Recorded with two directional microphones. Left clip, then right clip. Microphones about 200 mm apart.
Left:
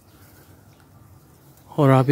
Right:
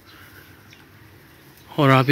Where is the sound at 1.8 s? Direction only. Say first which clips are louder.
Right 1 dB; 20° left (ahead or behind).